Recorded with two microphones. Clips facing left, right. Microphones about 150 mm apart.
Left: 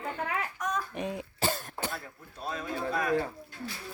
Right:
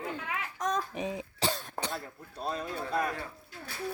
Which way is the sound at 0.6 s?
30° right (ahead or behind).